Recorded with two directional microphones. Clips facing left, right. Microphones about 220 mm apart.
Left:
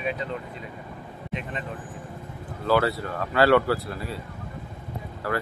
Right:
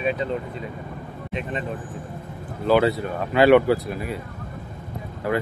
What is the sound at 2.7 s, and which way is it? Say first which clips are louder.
Speech: right 4 dB; 20° right (ahead or behind).